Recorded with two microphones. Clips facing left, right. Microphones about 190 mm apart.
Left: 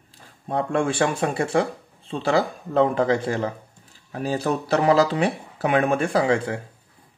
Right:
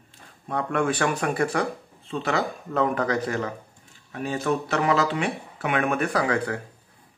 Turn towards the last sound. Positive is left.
turn(degrees=25)  # may be behind; listen again after turning